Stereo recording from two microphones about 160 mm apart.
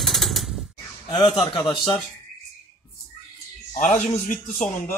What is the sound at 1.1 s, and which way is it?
Speech, 25° left (ahead or behind).